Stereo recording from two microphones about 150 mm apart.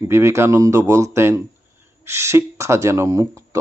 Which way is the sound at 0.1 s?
20° right (ahead or behind).